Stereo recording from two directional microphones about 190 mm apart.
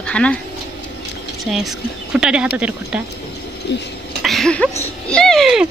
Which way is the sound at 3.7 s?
65° left (ahead or behind).